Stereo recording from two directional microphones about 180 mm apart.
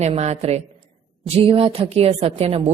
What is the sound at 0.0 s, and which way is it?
A woman's voice, 40° right (ahead or behind).